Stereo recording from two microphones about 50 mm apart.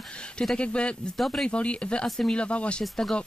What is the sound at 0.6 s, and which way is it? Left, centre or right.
Speech, left.